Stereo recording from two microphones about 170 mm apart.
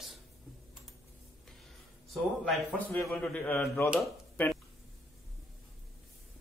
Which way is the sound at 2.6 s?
10° left (ahead or behind).